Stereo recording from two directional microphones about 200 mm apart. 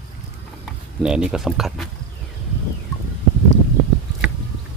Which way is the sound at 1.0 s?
5° right (ahead or behind).